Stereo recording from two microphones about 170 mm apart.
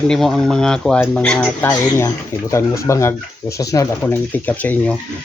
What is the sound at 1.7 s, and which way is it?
Speech, 20° left (ahead or behind).